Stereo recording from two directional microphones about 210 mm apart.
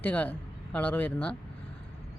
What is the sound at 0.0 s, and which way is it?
A man's voice, 5° left (ahead or behind).